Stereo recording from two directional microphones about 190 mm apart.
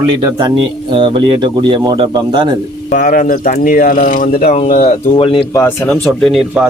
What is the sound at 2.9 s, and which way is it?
Speech, 45° left (ahead or behind).